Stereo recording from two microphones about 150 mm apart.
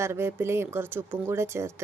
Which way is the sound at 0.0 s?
15° right (ahead or behind).